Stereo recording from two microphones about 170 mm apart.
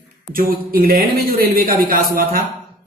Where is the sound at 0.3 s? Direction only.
55° right (ahead or behind).